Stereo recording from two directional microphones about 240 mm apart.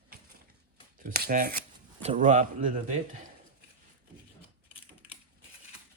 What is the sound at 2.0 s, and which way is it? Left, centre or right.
Speech, right.